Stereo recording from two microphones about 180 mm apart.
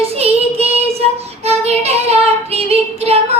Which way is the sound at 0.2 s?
35° right (ahead or behind).